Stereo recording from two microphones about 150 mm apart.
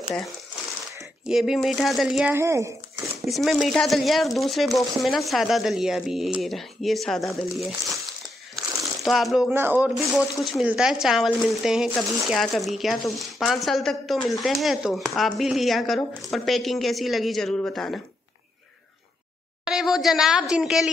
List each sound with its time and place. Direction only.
1.2 s speech: 5° right (ahead or behind)
2.3 s speech: 20° right (ahead or behind)
3.3 s speech: centre (ahead or behind)
9.0 s speech: centre (ahead or behind)
9.5 s speech: 15° right (ahead or behind)
9.8 s speech: centre (ahead or behind)
19.6 s speech: 5° right (ahead or behind)